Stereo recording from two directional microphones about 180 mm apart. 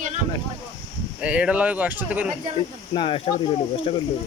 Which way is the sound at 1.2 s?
5° right (ahead or behind).